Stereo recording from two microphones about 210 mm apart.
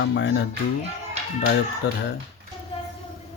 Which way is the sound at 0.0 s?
60° left (ahead or behind).